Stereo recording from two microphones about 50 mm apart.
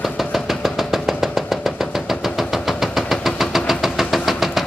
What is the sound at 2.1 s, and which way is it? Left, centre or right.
Engine, centre.